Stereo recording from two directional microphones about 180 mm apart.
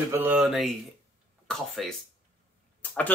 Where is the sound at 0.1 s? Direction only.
10° right (ahead or behind).